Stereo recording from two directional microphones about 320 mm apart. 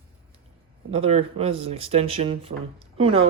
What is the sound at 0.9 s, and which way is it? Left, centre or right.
Speech, centre.